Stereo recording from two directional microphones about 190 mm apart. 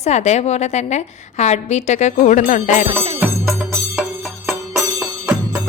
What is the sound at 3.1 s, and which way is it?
Music, 10° right (ahead or behind).